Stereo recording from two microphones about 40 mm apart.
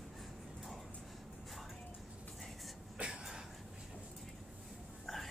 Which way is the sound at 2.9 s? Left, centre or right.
Centre.